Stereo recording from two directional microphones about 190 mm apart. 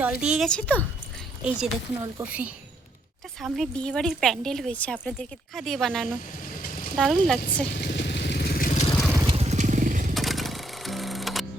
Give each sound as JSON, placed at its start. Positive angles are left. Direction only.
{"t": 0.0, "sound": "a woman's voice", "side_deg": -5}
{"t": 1.5, "sound": "a woman's voice", "side_deg": -5}
{"t": 6.6, "sound": "a sound", "side_deg": 45}
{"t": 6.9, "sound": "a woman's voice", "side_deg": 0}
{"t": 7.8, "sound": "vehicle", "side_deg": 65}
{"t": 9.2, "sound": "crushing", "side_deg": -30}
{"t": 10.2, "sound": "music", "side_deg": 0}